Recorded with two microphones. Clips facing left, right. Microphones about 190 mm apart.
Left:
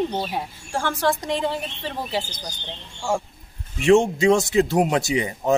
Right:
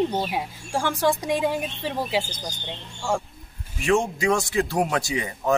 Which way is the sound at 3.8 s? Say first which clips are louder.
Left 6 dB; 25° left (ahead or behind).